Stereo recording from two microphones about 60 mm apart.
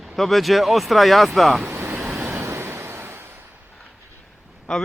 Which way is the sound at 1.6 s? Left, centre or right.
Right.